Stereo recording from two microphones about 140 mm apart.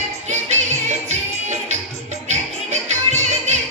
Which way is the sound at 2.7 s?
55° right (ahead or behind).